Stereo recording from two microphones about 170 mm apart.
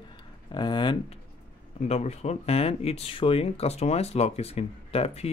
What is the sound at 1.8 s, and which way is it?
Speech, 40° left (ahead or behind).